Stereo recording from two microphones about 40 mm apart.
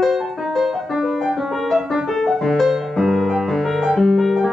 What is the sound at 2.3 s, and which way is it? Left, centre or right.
Music, centre.